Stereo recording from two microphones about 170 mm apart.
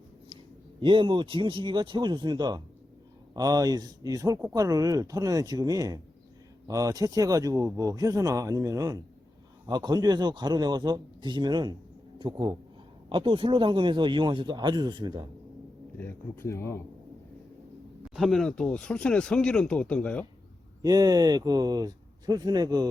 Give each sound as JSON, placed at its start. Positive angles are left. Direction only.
{"t": 0.8, "sound": "speech", "side_deg": -30}
{"t": 16.0, "sound": "speech", "side_deg": 15}
{"t": 18.1, "sound": "speech", "side_deg": 0}
{"t": 20.8, "sound": "speech", "side_deg": -20}